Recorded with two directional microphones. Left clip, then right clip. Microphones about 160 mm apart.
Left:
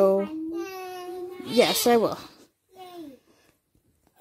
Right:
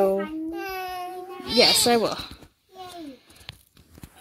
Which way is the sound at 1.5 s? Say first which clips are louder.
Right 2 dB; 15° left (ahead or behind).